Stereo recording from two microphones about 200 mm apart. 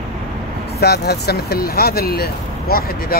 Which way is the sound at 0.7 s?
50° left (ahead or behind).